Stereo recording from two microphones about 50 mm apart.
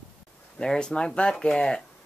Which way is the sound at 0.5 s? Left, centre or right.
Centre.